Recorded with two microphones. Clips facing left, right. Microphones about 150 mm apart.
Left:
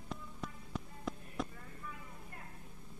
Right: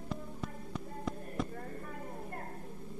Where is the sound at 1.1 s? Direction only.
Centre (ahead or behind).